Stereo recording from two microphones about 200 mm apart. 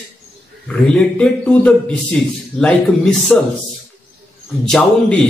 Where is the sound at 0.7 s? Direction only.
5° left (ahead or behind).